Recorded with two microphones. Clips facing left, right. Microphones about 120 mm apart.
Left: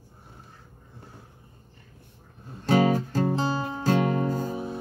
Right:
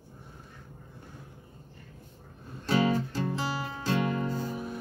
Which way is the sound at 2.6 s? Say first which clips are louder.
Left 5 dB; 45° left (ahead or behind).